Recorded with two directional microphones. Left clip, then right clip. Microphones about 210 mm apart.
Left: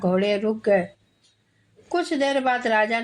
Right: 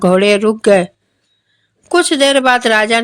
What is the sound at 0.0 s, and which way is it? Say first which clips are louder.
Speech: right 12 dB; 35° right (ahead or behind).